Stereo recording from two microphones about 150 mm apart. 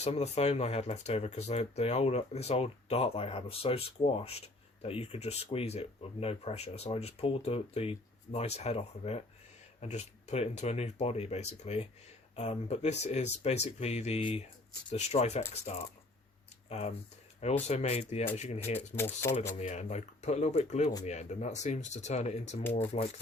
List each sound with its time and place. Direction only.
0.0 s speech: 45° left (ahead or behind)
16.6 s speech: 45° left (ahead or behind)
18.9 s speech: 15° left (ahead or behind)
19.5 s speech: 50° left (ahead or behind)